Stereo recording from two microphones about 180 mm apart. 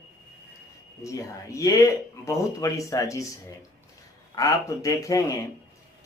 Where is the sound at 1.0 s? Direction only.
15° left (ahead or behind).